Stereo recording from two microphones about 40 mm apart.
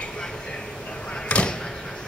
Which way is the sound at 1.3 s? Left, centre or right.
Left.